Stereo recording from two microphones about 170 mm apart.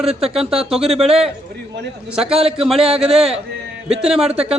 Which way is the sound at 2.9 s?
35° right (ahead or behind).